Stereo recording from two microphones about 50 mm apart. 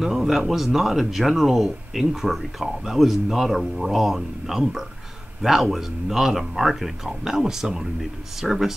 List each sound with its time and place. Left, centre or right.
0.0 s speech: centre